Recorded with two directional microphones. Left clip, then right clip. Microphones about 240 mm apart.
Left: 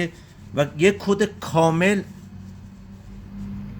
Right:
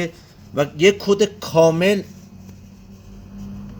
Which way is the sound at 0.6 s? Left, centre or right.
Centre.